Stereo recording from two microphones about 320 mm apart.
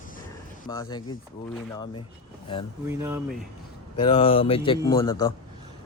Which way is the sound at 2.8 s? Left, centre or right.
Centre.